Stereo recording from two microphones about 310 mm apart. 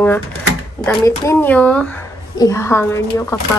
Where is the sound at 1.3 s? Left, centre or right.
Centre.